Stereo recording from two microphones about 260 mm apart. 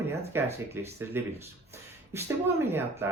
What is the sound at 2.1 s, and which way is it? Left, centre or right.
Speech, centre.